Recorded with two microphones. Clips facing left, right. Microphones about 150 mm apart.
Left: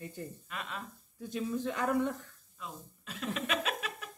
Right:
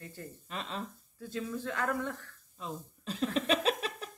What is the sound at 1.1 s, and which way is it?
Speech, 15° left (ahead or behind).